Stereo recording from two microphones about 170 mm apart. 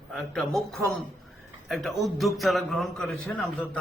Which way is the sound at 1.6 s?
Centre (ahead or behind).